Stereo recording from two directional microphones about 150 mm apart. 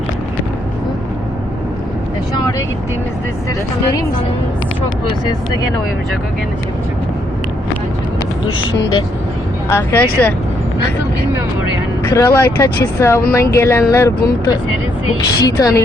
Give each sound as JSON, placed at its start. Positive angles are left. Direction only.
{"t": 9.7, "sound": "speech", "side_deg": 10}
{"t": 12.0, "sound": "speech", "side_deg": 20}
{"t": 15.4, "sound": "speech", "side_deg": 25}